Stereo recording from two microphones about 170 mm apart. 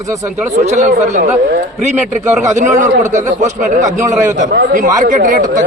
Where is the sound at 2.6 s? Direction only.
45° right (ahead or behind).